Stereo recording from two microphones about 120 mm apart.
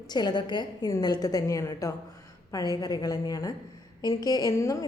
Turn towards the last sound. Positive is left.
turn(degrees=30)  # may be behind; listen again after turning